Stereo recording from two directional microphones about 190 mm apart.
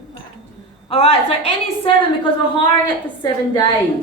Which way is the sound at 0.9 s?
30° left (ahead or behind).